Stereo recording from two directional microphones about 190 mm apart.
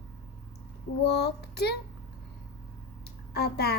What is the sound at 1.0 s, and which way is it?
Speech, 60° left (ahead or behind).